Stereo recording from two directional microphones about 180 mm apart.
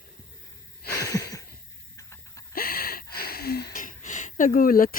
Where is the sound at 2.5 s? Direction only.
55° left (ahead or behind).